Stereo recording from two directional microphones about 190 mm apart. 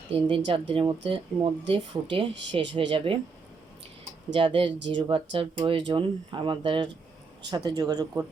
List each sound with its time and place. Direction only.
0.1 s speech: 25° right (ahead or behind)
4.3 s speech: 25° right (ahead or behind)